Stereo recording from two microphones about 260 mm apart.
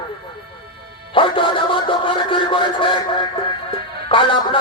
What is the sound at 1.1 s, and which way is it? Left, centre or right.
Music, centre.